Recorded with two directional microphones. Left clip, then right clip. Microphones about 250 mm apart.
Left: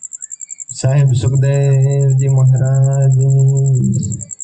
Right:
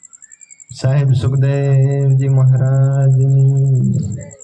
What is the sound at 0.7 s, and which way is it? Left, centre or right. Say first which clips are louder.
Speech: left 1 dB; left.